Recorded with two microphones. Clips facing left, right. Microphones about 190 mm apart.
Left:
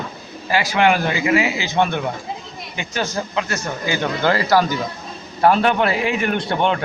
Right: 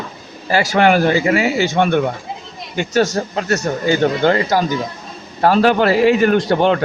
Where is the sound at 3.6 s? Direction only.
40° right (ahead or behind).